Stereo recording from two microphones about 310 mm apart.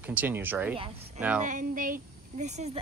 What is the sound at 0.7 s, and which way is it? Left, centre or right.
Speech, centre.